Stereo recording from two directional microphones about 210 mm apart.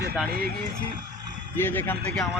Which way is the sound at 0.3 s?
45° right (ahead or behind).